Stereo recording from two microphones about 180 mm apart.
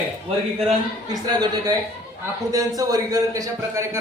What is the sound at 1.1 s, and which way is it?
A man's voice, 20° right (ahead or behind).